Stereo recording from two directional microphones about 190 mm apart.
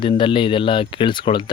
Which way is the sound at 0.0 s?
25° left (ahead or behind).